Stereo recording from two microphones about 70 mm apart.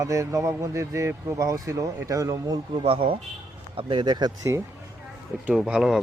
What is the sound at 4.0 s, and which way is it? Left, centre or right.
Speech, right.